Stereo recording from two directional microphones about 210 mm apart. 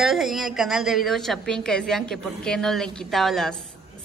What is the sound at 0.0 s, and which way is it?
A woman's voice, centre (ahead or behind).